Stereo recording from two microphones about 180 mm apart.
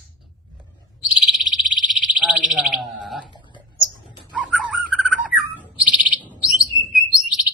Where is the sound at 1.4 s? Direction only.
45° right (ahead or behind).